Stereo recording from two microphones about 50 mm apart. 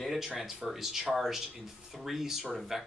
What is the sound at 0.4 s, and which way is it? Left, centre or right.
Speech, centre.